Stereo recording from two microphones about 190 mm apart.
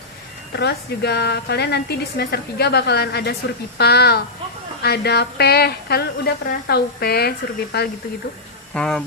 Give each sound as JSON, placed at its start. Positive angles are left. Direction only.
{"t": 0.5, "sound": "a woman's voice", "side_deg": 60}
{"t": 8.7, "sound": "speech", "side_deg": 5}